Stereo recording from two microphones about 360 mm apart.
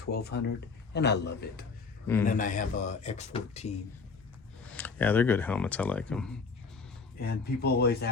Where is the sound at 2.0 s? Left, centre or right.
Centre.